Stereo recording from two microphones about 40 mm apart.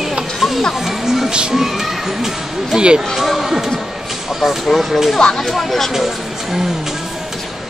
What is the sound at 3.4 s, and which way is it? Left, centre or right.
Speech, centre.